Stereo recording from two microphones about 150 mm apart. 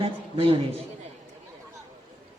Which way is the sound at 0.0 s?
40° right (ahead or behind).